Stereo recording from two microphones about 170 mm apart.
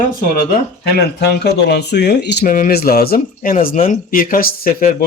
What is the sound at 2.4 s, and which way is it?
Speech, 55° left (ahead or behind).